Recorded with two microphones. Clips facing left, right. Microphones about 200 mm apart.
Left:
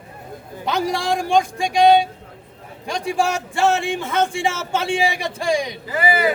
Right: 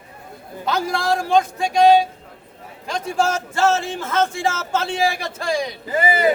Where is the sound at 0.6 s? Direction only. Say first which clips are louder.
Even; 15° left (ahead or behind).